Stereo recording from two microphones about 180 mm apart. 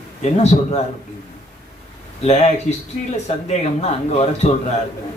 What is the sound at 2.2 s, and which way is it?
Speech, 35° left (ahead or behind).